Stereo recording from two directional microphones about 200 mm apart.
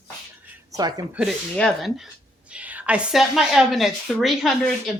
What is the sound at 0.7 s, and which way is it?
Speech, 20° right (ahead or behind).